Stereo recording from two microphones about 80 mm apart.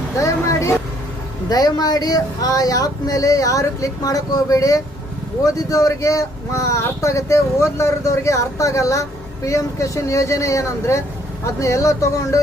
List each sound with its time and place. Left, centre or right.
0.2 s vehicle: left
1.5 s speech: left